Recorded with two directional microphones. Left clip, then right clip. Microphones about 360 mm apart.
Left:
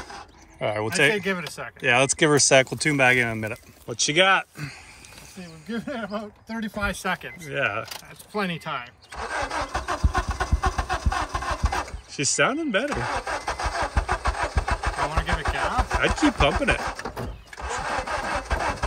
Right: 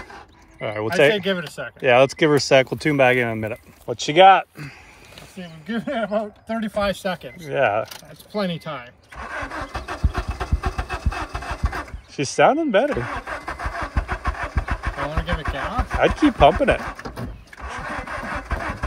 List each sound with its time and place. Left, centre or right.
0.1 s a sound: centre
1.6 s speech: centre
6.4 s speech: centre
9.1 s speech: left
9.7 s engine: centre
12.2 s speech: centre
13.0 s engine starting: left
15.6 s a sound: left
16.2 s speech: centre
16.8 s engine starting: left